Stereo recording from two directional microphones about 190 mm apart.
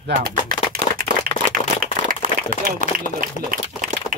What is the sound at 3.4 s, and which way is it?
Speech, 40° left (ahead or behind).